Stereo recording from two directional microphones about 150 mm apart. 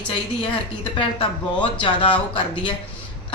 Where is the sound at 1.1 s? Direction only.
35° left (ahead or behind).